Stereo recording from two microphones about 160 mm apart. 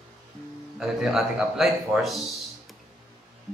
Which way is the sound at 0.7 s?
Centre (ahead or behind).